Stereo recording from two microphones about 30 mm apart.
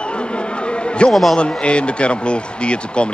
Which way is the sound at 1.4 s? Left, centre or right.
Left.